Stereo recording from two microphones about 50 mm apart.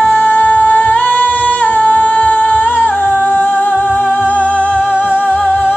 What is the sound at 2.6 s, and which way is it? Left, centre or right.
Music, left.